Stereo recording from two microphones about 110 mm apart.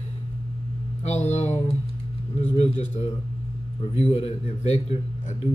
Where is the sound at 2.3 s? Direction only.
80° left.